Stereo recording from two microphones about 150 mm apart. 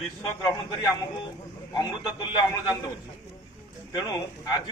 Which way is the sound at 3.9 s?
30° left (ahead or behind).